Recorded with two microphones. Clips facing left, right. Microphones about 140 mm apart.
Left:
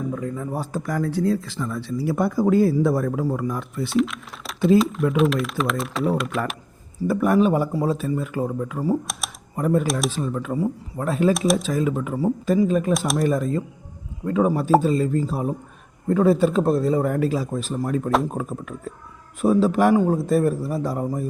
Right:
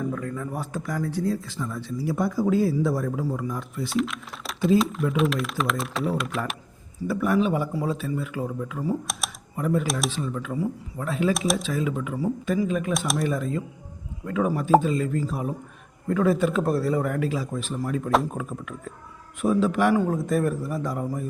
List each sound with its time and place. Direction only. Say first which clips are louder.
0.1 s a sound: left 2 dB; 20° left (ahead or behind)
0.5 s speech: left 4 dB; 35° left (ahead or behind)
0.9 s speech: left 5 dB; 65° left (ahead or behind)
3.8 s speech: left 5 dB; centre (ahead or behind)
7.1 s a man's voice: left 4 dB; 45° left (ahead or behind)
9.1 s speech: even; centre (ahead or behind)
9.6 s a man's voice: left 4 dB; 45° left (ahead or behind)
9.8 s speech: left 4 dB; centre (ahead or behind)
10.1 s speech: left 4 dB; 40° left (ahead or behind)
11.3 s speech: left 5 dB; centre (ahead or behind)
11.6 s a man's voice: left 4 dB; 45° left (ahead or behind)
12.1 s speech: left 6 dB; 30° left (ahead or behind)